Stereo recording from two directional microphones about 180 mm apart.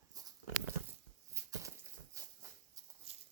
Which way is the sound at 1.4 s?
15° right (ahead or behind).